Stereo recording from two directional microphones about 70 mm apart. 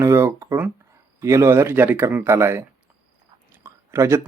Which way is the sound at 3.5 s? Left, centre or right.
Right.